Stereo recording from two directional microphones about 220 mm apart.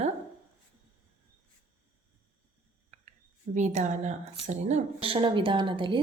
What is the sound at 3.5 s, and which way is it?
A woman's voice, 35° right (ahead or behind).